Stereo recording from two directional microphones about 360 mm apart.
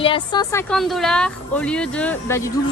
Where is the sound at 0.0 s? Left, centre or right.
Centre.